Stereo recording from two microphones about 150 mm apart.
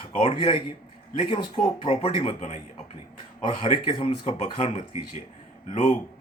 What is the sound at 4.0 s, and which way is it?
Speech, 45° left (ahead or behind).